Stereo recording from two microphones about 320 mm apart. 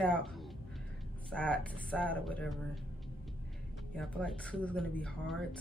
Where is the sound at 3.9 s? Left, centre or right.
Centre.